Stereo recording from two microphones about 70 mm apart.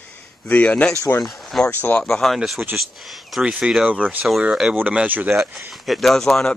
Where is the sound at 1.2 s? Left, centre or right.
Centre.